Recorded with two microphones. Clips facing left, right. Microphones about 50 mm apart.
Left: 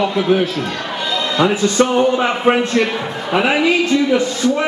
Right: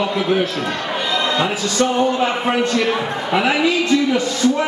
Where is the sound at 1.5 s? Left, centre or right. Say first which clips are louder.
Left 4 dB; left.